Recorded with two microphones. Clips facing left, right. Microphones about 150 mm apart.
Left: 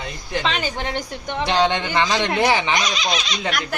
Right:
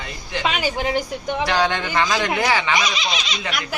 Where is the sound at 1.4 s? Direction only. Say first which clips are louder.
Left 3 dB; 20° left (ahead or behind).